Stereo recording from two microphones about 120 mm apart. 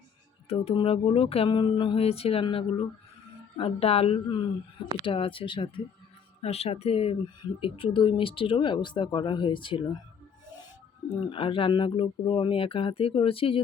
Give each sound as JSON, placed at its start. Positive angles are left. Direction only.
{"t": 0.4, "sound": "speech", "side_deg": 55}
{"t": 1.5, "sound": "speech", "side_deg": 40}
{"t": 6.4, "sound": "speech", "side_deg": 60}
{"t": 7.4, "sound": "speech", "side_deg": 45}
{"t": 11.3, "sound": "speech", "side_deg": 45}